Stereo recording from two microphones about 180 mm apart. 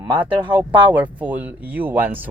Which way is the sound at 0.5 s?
10° right (ahead or behind).